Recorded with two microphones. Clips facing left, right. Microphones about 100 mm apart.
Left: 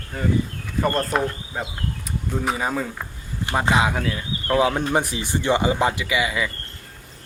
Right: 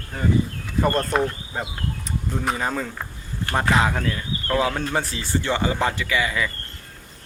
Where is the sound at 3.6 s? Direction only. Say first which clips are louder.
Even; 20° left (ahead or behind).